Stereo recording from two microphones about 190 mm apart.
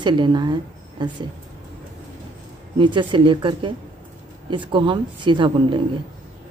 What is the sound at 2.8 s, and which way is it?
A woman's voice, 25° right (ahead or behind).